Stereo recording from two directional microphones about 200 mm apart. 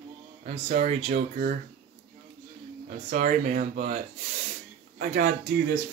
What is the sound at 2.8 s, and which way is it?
Speech, 40° right (ahead or behind).